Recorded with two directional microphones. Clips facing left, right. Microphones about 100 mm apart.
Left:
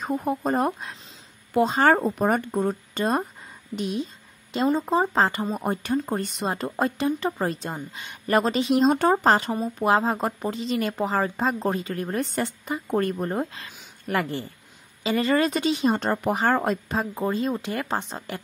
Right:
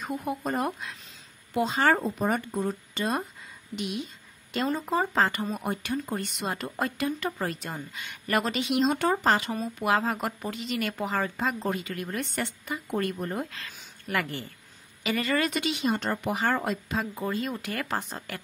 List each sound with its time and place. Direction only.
0.0 s speech: 35° left (ahead or behind)
4.5 s speech: 25° left (ahead or behind)